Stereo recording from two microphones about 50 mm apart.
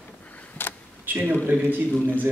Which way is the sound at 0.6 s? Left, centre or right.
Left.